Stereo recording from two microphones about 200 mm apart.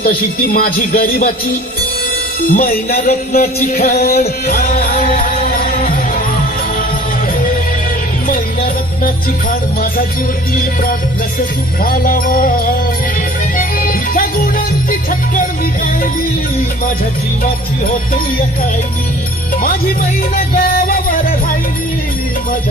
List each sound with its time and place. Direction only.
0.0 s speech: 45° left (ahead or behind)
2.5 s speech: 45° left (ahead or behind)
4.4 s music: 50° left (ahead or behind)
8.3 s music: 45° left (ahead or behind)
11.8 s speech: 45° left (ahead or behind)
13.6 s music: 45° left (ahead or behind)
17.4 s speech: 45° left (ahead or behind)
20.3 s music: 45° left (ahead or behind)